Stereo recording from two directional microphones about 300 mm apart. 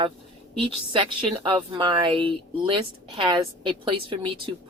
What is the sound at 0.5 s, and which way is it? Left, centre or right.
A woman's voice, centre.